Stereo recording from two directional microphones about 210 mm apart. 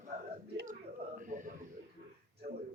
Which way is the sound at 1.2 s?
40° right (ahead or behind).